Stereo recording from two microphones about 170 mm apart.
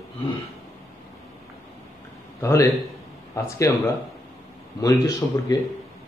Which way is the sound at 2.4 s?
15° left (ahead or behind).